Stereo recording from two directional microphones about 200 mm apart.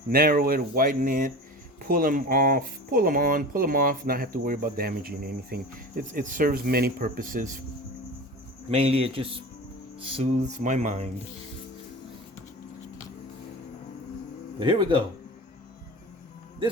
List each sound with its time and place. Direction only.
0.1 s speech: 45° right (ahead or behind)
8.7 s a man's voice: 30° right (ahead or behind)
14.6 s a man's voice: 25° right (ahead or behind)